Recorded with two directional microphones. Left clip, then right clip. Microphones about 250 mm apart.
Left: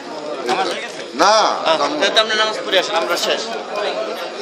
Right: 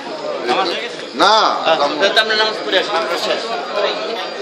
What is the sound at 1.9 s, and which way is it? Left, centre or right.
A man's voice, left.